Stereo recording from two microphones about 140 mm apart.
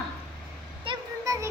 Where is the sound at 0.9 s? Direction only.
40° right (ahead or behind).